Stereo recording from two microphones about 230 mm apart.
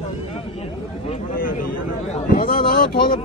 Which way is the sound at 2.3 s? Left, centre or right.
Left.